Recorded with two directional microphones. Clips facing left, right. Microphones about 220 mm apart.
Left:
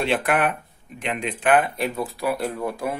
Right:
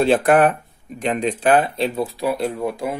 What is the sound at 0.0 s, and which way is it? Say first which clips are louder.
Speech: right 7 dB; 40° right (ahead or behind).